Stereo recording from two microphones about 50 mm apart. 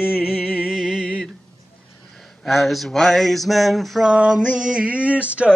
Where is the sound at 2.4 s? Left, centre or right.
Centre.